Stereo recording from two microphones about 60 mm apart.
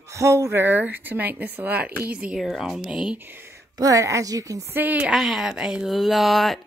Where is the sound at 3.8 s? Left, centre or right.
Right.